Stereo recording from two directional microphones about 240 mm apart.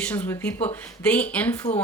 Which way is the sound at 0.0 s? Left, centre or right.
Centre.